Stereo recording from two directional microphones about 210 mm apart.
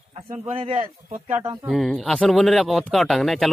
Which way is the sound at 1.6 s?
Centre (ahead or behind).